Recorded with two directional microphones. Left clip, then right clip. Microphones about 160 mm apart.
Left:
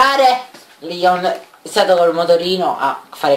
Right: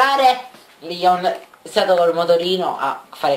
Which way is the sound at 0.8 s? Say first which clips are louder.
Left 2 dB; centre (ahead or behind).